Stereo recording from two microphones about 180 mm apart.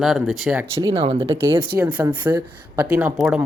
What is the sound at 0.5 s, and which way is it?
Speech, 20° right (ahead or behind).